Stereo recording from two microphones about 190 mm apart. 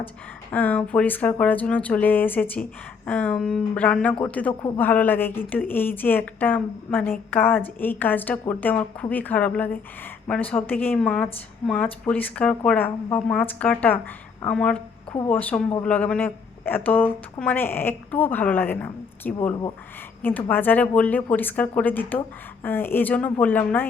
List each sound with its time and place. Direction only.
0.5 s speech: 10° left (ahead or behind)